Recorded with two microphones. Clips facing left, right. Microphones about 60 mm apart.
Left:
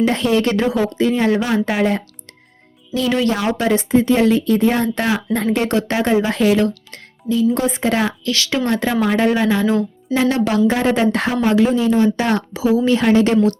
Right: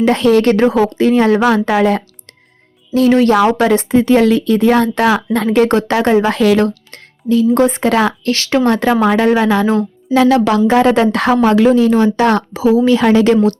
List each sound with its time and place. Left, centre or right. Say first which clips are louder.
0.0 s a woman's voice: right 6 dB; right
2.9 s speech: right 7 dB; right
3.6 s a woman's voice: right 4 dB; right
6.7 s music: right 2 dB; right
7.5 s a woman's voice: right 6 dB; right
8.3 s speech: right 6 dB; right
8.7 s a woman's voice: right 5 dB; right
10.2 s a woman's voice: right 6 dB; right
12.5 s a woman's voice: right 3 dB; right